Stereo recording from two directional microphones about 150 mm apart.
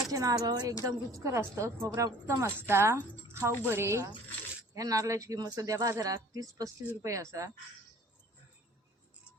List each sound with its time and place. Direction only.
0.1 s a woman's voice: 25° right (ahead or behind)